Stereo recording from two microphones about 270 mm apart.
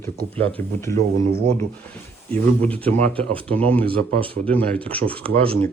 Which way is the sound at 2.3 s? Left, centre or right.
Centre.